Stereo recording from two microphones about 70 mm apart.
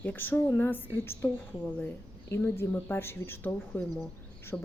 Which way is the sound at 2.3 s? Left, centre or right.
Left.